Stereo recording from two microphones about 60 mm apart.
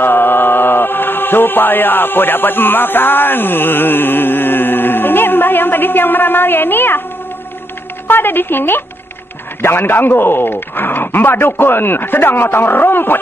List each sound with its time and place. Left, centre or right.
0.0 s mantra: left
8.1 s speech: left